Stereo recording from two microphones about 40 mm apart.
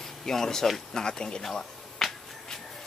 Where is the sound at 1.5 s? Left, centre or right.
Centre.